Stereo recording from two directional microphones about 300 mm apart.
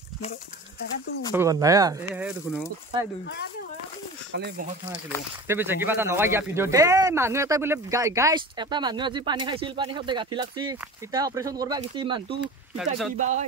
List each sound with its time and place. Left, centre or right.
1.3 s speech: centre
4.3 s speech: right
5.5 s speech: centre
12.4 s speech: centre